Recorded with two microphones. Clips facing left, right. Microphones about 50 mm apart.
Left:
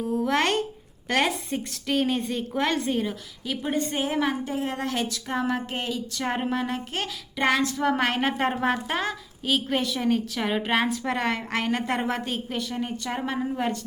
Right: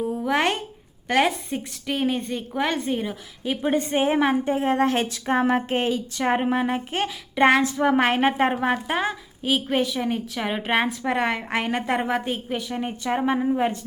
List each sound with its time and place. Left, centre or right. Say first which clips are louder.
0.0 s a sound: even; centre
0.3 s a woman's voice: right 2 dB; centre
3.4 s a woman's voice: right 4 dB; right; by 11.1 s centre
11.1 s a woman's voice: right 3 dB; centre